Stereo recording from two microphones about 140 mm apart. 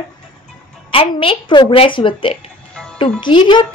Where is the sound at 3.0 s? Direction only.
40° left (ahead or behind).